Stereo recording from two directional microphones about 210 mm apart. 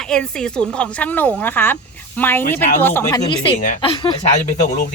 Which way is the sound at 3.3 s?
25° left (ahead or behind).